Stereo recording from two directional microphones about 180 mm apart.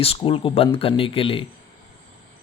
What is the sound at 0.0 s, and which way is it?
Speech, 30° left (ahead or behind).